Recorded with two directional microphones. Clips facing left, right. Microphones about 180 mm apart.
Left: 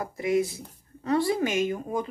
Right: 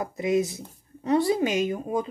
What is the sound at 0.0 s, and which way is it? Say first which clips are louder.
Speech: right 1 dB; 20° right (ahead or behind).